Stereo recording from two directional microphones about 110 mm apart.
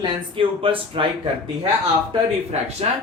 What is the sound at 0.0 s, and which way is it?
Speech, 55° right (ahead or behind).